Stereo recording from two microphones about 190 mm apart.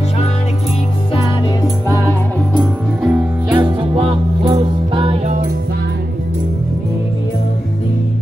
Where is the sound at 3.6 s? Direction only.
25° right (ahead or behind).